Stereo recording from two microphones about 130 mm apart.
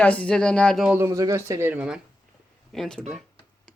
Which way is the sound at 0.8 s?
10° right (ahead or behind).